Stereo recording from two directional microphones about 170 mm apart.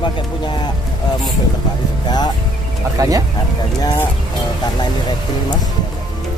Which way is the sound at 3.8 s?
20° left (ahead or behind).